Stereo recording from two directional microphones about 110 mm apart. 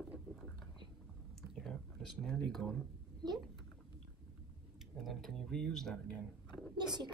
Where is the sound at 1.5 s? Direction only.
Centre (ahead or behind).